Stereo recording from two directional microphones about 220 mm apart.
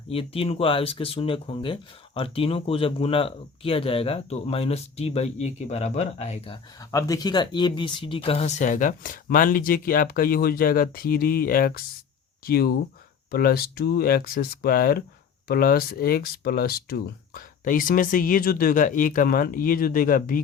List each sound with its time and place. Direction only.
0.1 s speech: 25° left (ahead or behind)
6.9 s speech: 15° left (ahead or behind); by 20.4 s 40° left (ahead or behind)